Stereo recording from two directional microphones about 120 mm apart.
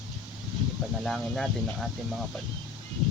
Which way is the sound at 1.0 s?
Centre (ahead or behind).